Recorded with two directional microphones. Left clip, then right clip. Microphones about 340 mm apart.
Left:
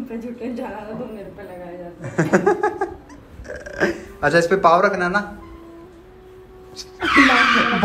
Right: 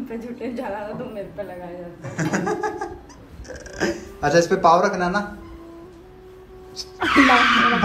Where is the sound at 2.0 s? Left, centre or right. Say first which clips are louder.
Left 7 dB; centre.